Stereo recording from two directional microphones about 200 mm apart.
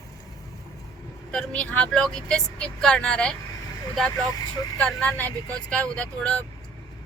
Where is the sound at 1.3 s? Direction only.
5° left (ahead or behind).